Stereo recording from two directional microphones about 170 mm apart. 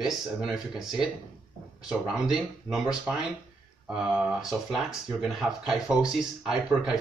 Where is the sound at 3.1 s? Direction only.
Centre (ahead or behind).